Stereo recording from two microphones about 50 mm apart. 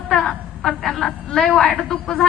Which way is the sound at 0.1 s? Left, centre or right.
Centre.